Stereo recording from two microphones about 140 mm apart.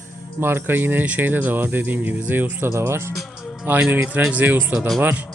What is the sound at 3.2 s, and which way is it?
Music, centre (ahead or behind).